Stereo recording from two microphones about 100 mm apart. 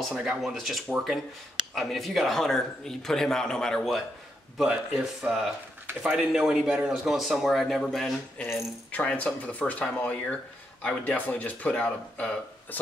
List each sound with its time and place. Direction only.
0.0 s a man's voice: 5° right (ahead or behind)
4.6 s a man's voice: 5° right (ahead or behind)
8.4 s speech: 20° left (ahead or behind)